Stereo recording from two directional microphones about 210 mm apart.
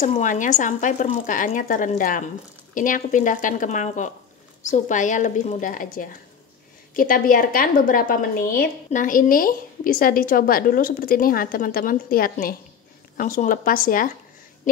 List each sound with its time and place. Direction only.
0.0 s a woman's voice: 35° left (ahead or behind)